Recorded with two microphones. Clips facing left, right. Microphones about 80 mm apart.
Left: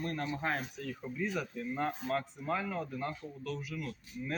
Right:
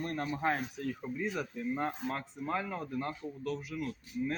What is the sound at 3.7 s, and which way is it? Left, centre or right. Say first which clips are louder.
Speech: right 4 dB; centre.